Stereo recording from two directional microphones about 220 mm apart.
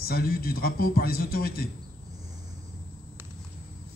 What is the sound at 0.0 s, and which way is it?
A man's voice, 40° left (ahead or behind).